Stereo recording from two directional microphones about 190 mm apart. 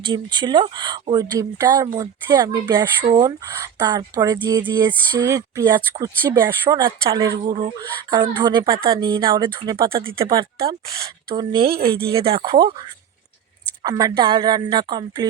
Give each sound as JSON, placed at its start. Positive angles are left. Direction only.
{"t": 0.0, "sound": "speech", "side_deg": -25}
{"t": 11.7, "sound": "speech", "side_deg": -55}
{"t": 12.1, "sound": "speech", "side_deg": -30}
{"t": 13.8, "sound": "speech", "side_deg": -20}